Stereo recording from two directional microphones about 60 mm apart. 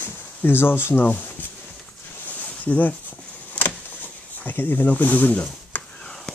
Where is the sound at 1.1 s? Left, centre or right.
Left.